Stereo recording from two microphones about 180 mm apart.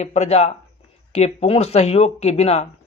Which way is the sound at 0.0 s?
35° left (ahead or behind).